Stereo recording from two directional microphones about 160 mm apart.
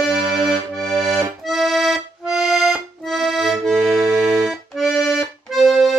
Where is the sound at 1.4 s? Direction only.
Centre (ahead or behind).